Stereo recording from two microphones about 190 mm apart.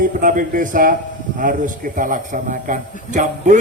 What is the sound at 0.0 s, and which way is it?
A man's voice, 45° right (ahead or behind).